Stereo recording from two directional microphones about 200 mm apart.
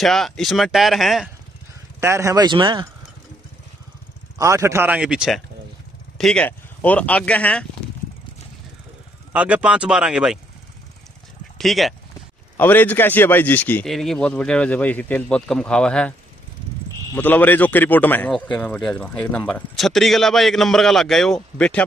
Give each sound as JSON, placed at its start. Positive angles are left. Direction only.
{"t": 0.0, "sound": "a man's voice", "side_deg": 0}
{"t": 2.0, "sound": "speech", "side_deg": -15}
{"t": 4.4, "sound": "speech", "side_deg": -15}
{"t": 9.3, "sound": "a man's voice", "side_deg": -5}
{"t": 11.5, "sound": "a man's voice", "side_deg": 0}